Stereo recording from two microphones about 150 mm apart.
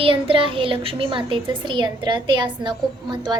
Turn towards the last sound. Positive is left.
turn(degrees=-30)  # may be behind; listen again after turning